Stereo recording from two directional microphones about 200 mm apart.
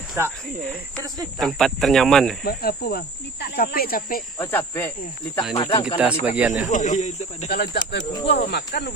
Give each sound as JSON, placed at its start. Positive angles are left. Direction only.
{"t": 0.9, "sound": "speech", "side_deg": -20}
{"t": 1.4, "sound": "speech", "side_deg": 0}
{"t": 2.4, "sound": "speech", "side_deg": 50}
{"t": 4.4, "sound": "speech", "side_deg": 10}
{"t": 5.4, "sound": "speech", "side_deg": 20}
{"t": 6.2, "sound": "speech", "side_deg": -5}
{"t": 6.7, "sound": "speech", "side_deg": 35}
{"t": 7.4, "sound": "speech", "side_deg": 50}
{"t": 8.0, "sound": "speech", "side_deg": 20}
{"t": 8.3, "sound": "speech", "side_deg": 55}